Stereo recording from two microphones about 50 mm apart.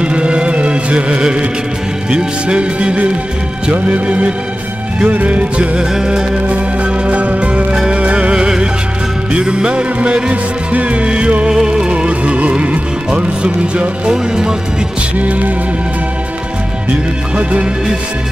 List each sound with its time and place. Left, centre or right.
0.0 s music: right
6.4 s music: right
15.1 s music: right
17.4 s music: right